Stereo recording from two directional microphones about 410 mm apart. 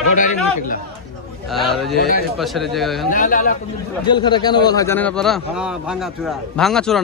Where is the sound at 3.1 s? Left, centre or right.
Centre.